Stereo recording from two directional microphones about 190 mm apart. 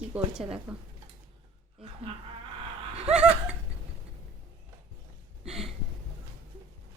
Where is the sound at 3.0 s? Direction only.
30° right (ahead or behind).